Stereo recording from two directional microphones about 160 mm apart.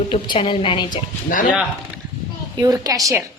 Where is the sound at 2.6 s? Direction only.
25° right (ahead or behind).